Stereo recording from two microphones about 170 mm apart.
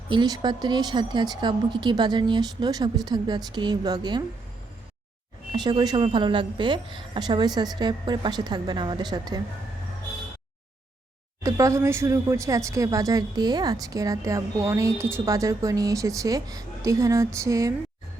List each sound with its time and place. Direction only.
0.1 s speech: 25° right (ahead or behind)
5.5 s speech: 25° right (ahead or behind)
11.4 s speech: 20° right (ahead or behind)